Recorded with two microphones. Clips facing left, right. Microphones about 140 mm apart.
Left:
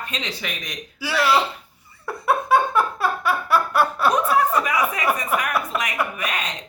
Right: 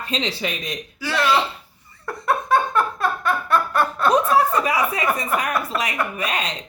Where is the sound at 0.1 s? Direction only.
30° right (ahead or behind).